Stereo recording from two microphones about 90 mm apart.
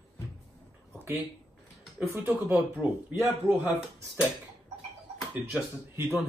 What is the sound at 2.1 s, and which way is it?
A man's voice, 20° right (ahead or behind).